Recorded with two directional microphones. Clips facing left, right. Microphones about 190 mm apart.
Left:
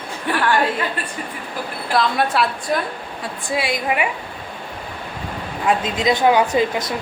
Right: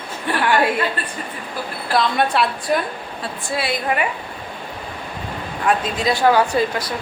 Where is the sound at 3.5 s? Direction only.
15° left (ahead or behind).